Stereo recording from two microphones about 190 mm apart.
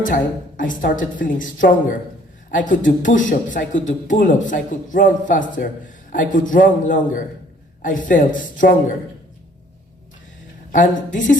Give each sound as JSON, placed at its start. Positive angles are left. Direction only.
{"t": 0.0, "sound": "speech", "side_deg": 45}
{"t": 10.7, "sound": "speech", "side_deg": 40}